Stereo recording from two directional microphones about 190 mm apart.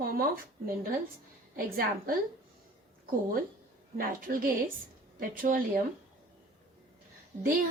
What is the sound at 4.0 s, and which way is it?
A woman's voice, 45° right (ahead or behind).